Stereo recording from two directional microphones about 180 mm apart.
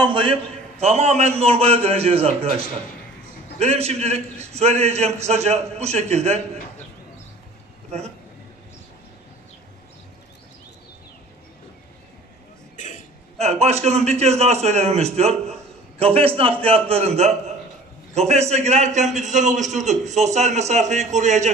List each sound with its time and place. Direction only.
0.0 s a man's voice: 30° right (ahead or behind)
3.5 s a man's voice: 35° right (ahead or behind)
12.7 s throat clearing: 45° left (ahead or behind)
13.4 s a man's voice: 40° right (ahead or behind)